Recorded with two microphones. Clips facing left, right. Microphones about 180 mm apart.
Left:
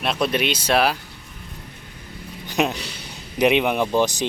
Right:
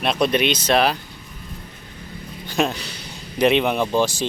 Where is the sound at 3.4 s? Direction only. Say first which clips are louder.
Right 1 dB; 10° left (ahead or behind).